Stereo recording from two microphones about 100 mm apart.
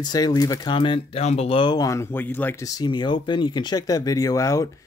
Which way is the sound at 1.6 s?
35° left (ahead or behind).